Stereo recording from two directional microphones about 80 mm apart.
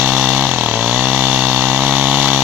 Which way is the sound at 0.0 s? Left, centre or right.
Centre.